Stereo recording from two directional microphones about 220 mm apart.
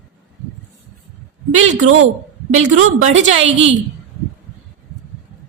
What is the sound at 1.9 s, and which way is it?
A woman's voice, 65° right (ahead or behind).